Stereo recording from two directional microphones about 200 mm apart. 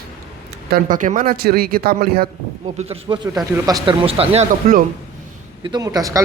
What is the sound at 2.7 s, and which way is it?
A man's voice, 30° right (ahead or behind).